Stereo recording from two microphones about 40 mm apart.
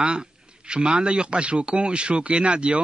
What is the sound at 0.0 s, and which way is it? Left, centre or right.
A man's voice, right.